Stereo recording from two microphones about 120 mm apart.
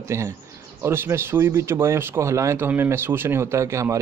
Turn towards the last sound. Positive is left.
turn(degrees=-25)  # may be behind; listen again after turning